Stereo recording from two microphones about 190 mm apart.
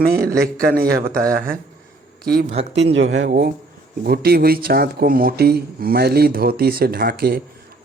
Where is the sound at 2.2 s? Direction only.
55° right (ahead or behind).